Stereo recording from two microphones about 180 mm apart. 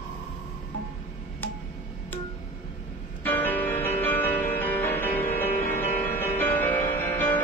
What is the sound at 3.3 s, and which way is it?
Music, 10° left (ahead or behind).